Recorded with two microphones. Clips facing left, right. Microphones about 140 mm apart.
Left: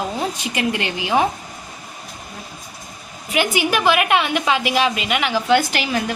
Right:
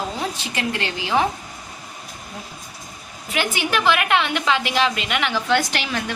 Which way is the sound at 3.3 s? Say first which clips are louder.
Left 4 dB; 10° left (ahead or behind).